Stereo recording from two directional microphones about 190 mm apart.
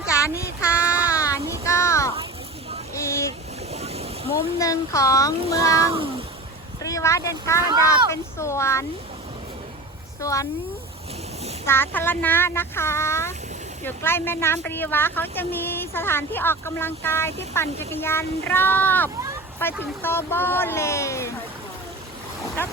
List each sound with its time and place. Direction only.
0.1 s child singing: 15° left (ahead or behind)
2.9 s vehicle: 15° left (ahead or behind)
3.7 s boat: 35° right (ahead or behind)
4.6 s speech: 15° left (ahead or behind)
6.8 s speech: 15° left (ahead or behind)
10.2 s speech: 15° left (ahead or behind)
11.6 s speech: 10° left (ahead or behind)
22.4 s speech: 15° left (ahead or behind)